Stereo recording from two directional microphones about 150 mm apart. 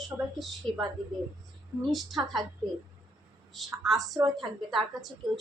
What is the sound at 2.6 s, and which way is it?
Speech, 35° right (ahead or behind).